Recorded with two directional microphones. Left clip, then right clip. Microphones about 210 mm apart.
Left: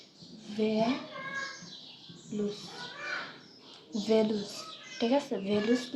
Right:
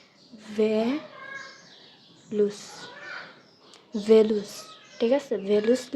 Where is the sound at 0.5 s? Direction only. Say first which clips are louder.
Right 7 dB; 40° right (ahead or behind).